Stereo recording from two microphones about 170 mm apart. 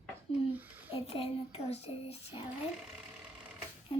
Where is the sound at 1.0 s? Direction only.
35° left (ahead or behind).